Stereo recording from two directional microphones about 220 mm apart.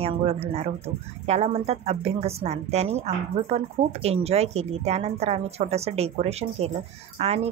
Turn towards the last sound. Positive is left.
turn(degrees=-25)  # may be behind; listen again after turning